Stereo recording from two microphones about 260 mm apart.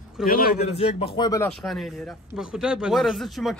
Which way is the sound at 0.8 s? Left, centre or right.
Left.